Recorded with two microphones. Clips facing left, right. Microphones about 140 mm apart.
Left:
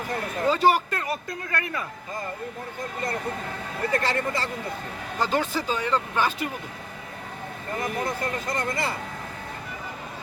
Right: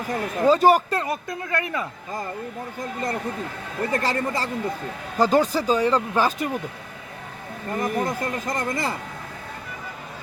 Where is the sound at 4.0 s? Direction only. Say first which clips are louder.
Right 2 dB; 40° right (ahead or behind).